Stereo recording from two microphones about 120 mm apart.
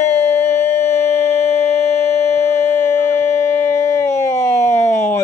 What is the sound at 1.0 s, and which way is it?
Music, 60° left (ahead or behind).